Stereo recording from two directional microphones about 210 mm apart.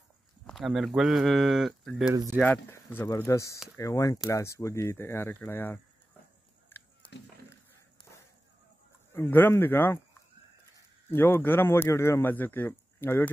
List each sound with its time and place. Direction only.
0.5 s speech: centre (ahead or behind)
2.4 s a man's voice: 10° left (ahead or behind)
7.0 s a sound: 5° left (ahead or behind)
9.1 s a man's voice: 10° left (ahead or behind)
11.1 s a man's voice: 10° left (ahead or behind)